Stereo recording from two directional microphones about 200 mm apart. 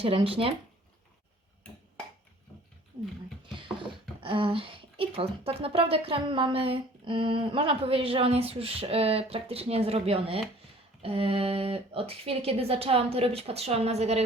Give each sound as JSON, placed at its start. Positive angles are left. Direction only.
{"t": 0.0, "sound": "a woman's voice", "side_deg": -25}
{"t": 4.2, "sound": "a woman's voice", "side_deg": -25}